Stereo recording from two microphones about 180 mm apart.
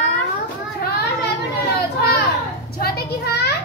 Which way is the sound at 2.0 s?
65° left (ahead or behind).